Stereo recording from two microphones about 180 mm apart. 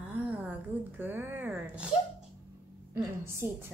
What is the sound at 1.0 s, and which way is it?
Speech, 10° right (ahead or behind).